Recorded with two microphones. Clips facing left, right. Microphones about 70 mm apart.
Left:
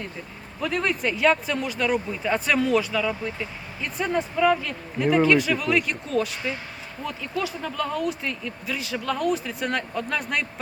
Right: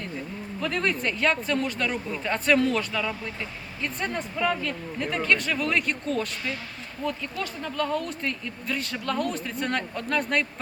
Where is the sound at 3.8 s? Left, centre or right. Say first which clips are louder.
Left 4 dB; centre.